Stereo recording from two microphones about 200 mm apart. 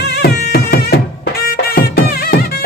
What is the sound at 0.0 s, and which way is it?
Music, 55° left (ahead or behind).